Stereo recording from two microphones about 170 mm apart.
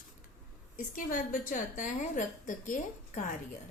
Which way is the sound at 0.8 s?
50° left (ahead or behind).